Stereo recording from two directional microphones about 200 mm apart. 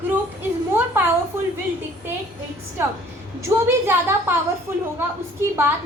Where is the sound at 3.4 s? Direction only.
10° right (ahead or behind).